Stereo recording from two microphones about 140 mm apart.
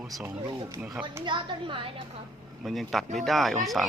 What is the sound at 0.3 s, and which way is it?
A woman's voice, 30° right (ahead or behind).